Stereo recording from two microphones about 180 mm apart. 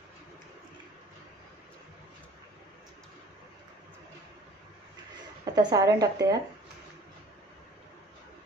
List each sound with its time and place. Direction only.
5.4 s a woman's voice: 20° right (ahead or behind)